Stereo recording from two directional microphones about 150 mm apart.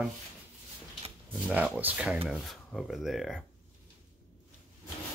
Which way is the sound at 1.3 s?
10° right (ahead or behind).